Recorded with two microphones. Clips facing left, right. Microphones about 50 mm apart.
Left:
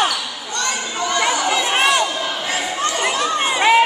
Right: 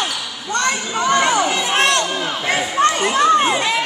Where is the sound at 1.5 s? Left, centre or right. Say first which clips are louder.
Even; centre.